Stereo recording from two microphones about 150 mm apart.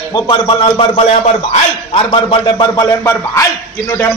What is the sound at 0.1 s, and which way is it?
A man's voice, 35° left (ahead or behind).